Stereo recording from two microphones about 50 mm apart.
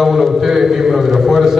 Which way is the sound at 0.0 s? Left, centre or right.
Centre.